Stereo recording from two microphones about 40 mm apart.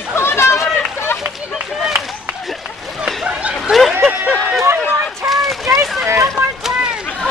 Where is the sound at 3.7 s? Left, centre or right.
Centre.